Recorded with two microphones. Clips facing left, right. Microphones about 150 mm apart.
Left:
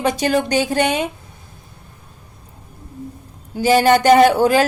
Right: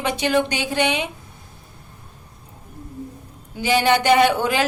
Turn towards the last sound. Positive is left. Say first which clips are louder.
# left 5 dB
turn(degrees=40)  # may be behind; listen again after turning